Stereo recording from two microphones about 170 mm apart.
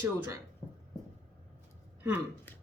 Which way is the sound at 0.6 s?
40° left (ahead or behind).